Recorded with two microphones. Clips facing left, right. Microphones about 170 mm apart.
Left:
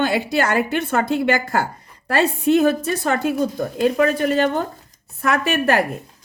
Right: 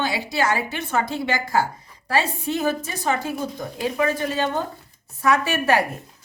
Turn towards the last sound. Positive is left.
turn(degrees=55)  # may be behind; listen again after turning